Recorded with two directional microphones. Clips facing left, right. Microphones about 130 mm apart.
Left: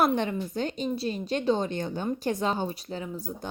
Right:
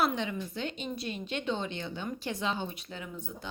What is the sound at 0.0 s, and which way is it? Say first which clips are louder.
Speech: left 5 dB; 50° left (ahead or behind).